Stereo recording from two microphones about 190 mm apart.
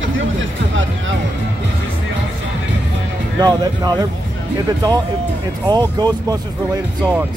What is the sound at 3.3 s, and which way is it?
Speech, 20° right (ahead or behind).